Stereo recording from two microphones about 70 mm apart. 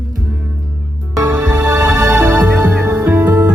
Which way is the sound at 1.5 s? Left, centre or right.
Right.